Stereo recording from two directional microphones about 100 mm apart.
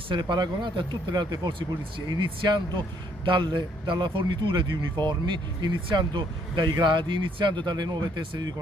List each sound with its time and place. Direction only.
0.1 s a man's voice: 50° right (ahead or behind)